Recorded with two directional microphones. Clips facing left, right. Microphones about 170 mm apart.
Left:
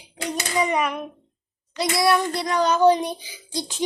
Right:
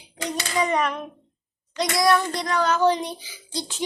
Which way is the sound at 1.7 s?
5° left (ahead or behind).